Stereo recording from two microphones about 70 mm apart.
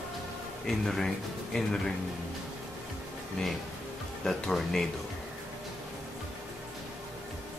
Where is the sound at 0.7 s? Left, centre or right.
Centre.